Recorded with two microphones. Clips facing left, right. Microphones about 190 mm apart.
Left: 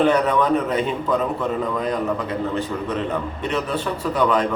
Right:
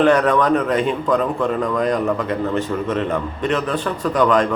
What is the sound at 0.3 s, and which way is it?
Speech, 10° left (ahead or behind).